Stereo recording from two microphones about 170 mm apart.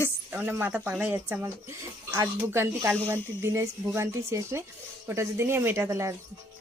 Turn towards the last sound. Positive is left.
turn(degrees=-15)  # may be behind; listen again after turning